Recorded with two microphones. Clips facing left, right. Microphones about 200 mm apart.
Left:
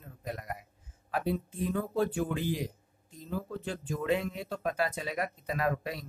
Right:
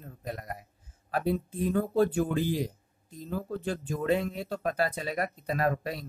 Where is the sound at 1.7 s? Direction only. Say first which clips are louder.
Right 5 dB; 40° right (ahead or behind).